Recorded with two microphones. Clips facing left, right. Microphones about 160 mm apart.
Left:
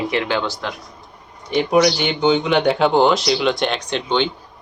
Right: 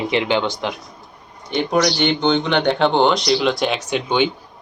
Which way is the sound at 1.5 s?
5° left (ahead or behind).